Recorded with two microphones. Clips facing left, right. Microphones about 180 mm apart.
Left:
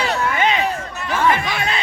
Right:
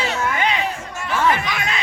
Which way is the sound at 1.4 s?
30° left (ahead or behind).